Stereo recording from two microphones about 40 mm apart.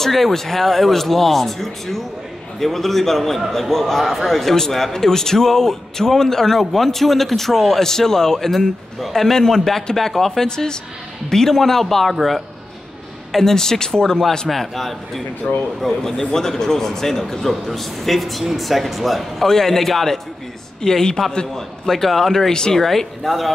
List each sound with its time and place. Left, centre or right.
0.0 s a man's voice: centre
14.5 s speech: centre
15.5 s speech: left
15.8 s a man's voice: centre